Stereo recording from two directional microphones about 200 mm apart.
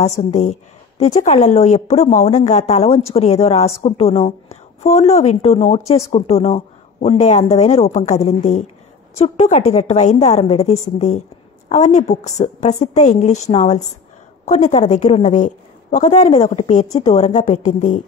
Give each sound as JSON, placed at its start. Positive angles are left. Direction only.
{"t": 0.2, "sound": "a woman's voice", "side_deg": 35}